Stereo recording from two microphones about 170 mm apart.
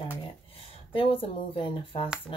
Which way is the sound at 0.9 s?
30° left (ahead or behind).